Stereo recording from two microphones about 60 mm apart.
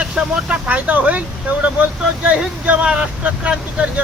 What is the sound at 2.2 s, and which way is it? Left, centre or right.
Speech, right.